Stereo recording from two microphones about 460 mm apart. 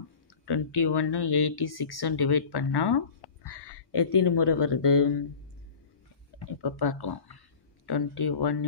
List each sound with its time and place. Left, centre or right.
0.5 s speech: left
6.4 s speech: left